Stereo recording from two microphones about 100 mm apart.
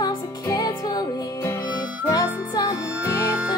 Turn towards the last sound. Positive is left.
turn(degrees=-15)  # may be behind; listen again after turning